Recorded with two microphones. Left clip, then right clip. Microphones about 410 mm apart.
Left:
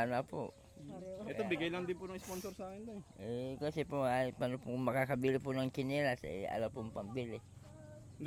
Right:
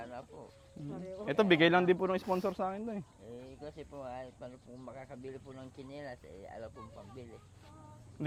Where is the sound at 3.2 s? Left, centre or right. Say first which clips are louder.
Left 7 dB; left.